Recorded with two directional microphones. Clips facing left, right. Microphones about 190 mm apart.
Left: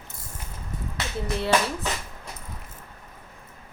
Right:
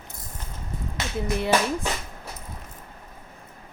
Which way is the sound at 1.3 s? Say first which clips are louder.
Right 1 dB; 15° right (ahead or behind).